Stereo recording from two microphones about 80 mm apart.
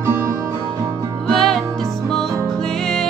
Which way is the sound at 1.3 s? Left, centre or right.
Centre.